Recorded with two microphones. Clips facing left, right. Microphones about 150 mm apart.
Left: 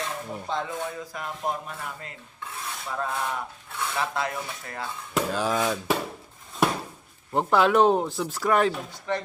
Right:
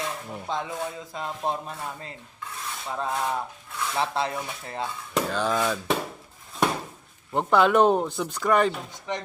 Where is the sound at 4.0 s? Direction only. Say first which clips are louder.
Right 2 dB; 30° right (ahead or behind).